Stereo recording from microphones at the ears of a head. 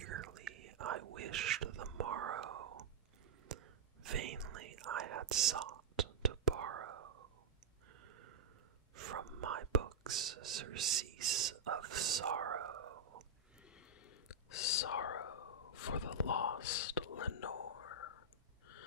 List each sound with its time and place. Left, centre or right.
0.0 s whispering: right
8.0 s a sound: right
8.9 s whispering: right
14.2 s whispering: left